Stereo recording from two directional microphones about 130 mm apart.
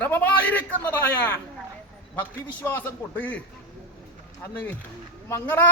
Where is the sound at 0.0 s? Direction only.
15° left (ahead or behind).